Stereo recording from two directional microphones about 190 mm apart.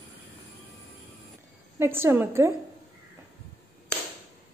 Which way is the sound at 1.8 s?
10° right (ahead or behind).